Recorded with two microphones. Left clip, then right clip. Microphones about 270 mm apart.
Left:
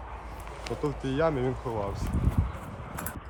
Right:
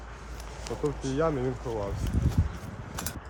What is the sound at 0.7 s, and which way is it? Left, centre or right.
Speech, left.